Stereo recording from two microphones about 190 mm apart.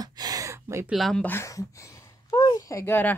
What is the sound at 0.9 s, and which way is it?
Speech, centre (ahead or behind).